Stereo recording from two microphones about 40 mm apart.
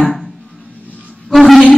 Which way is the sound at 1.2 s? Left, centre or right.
Centre.